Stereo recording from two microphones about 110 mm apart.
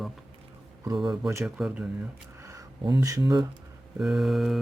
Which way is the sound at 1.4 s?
5° right (ahead or behind).